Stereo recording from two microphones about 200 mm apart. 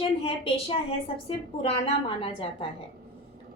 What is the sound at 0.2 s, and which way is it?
A woman's voice, 30° left (ahead or behind).